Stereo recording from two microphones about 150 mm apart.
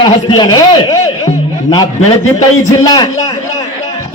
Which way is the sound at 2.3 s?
25° left (ahead or behind).